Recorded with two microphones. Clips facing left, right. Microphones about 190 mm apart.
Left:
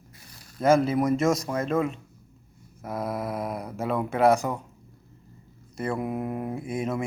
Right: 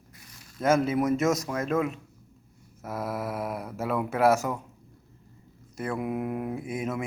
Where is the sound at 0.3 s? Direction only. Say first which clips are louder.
Left 2 dB; 35° left (ahead or behind).